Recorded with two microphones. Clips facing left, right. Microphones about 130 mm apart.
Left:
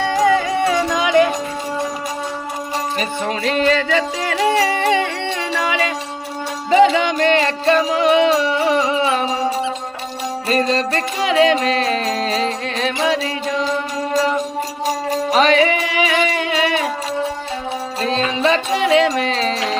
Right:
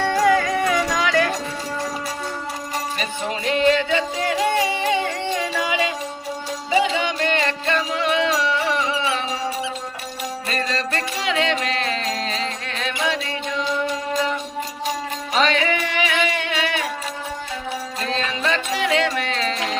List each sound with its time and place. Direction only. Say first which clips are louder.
0.3 s music: left 3 dB; 25° left (ahead or behind)
3.2 s music: left 1 dB; 90° left
6.7 s music: left 8 dB; 50° left (ahead or behind)
16.0 s music: left 4 dB; 30° left (ahead or behind)
18.0 s music: left 7 dB; 30° left (ahead or behind)